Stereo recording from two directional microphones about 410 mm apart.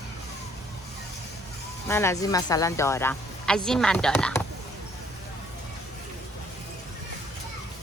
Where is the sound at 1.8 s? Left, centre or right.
Centre.